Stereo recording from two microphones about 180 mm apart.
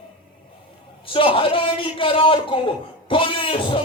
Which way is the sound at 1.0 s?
30° left (ahead or behind).